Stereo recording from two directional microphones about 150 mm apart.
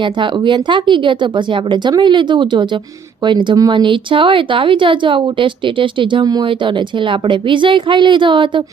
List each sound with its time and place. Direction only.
0.0 s speech: 30° right (ahead or behind)